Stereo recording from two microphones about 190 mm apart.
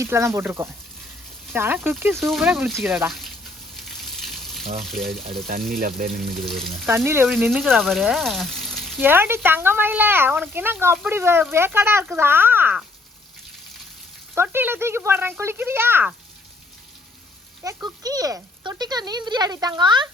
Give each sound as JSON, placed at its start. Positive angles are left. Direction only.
{"t": 0.0, "sound": "speech", "side_deg": -15}
{"t": 3.8, "sound": "frying", "side_deg": 0}
{"t": 5.7, "sound": "speech", "side_deg": -50}
{"t": 6.3, "sound": "speech", "side_deg": 0}
{"t": 6.8, "sound": "speech", "side_deg": -10}
{"t": 9.0, "sound": "speech", "side_deg": -10}
{"t": 14.3, "sound": "speech", "side_deg": -10}
{"t": 17.8, "sound": "speech", "side_deg": -20}